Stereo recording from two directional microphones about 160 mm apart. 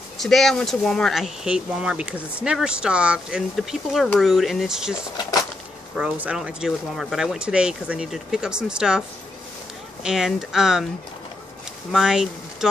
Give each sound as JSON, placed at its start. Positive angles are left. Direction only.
{"t": 0.2, "sound": "speech", "side_deg": 0}
{"t": 10.0, "sound": "speech", "side_deg": 0}
{"t": 11.9, "sound": "speech", "side_deg": -5}